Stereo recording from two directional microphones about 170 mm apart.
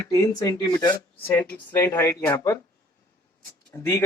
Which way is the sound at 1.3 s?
10° left (ahead or behind).